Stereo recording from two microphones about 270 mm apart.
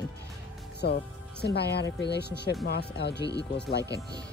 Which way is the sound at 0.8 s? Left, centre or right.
Left.